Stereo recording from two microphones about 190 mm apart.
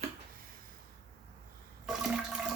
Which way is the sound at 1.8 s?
5° right (ahead or behind).